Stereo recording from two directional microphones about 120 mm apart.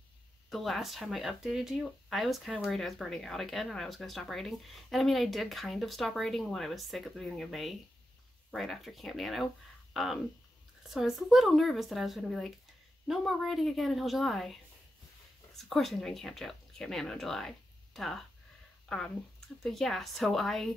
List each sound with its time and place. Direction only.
0.5 s speech: centre (ahead or behind)